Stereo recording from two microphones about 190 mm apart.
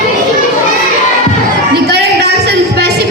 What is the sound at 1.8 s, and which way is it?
Music, 60° right (ahead or behind).